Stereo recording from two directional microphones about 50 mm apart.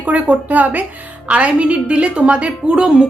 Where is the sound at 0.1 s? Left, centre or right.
Right.